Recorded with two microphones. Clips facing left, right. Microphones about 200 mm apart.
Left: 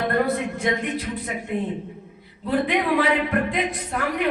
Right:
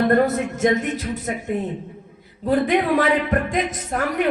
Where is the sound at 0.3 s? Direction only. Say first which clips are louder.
Right 4 dB; 45° right (ahead or behind).